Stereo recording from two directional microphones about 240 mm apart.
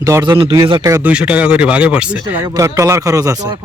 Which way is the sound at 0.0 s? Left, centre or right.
Centre.